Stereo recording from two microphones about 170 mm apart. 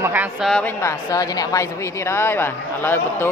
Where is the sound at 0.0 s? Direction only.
10° right (ahead or behind).